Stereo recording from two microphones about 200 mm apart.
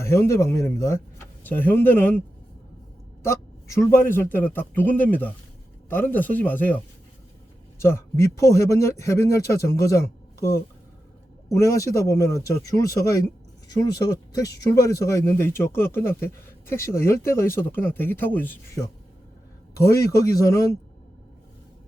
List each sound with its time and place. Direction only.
0.0 s a man's voice: 15° left (ahead or behind)
3.2 s a man's voice: 15° left (ahead or behind)
7.8 s a man's voice: 15° left (ahead or behind)
11.5 s a man's voice: 15° left (ahead or behind)